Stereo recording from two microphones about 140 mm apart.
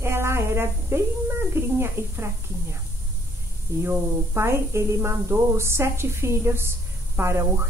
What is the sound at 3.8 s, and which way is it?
Speech, 20° right (ahead or behind).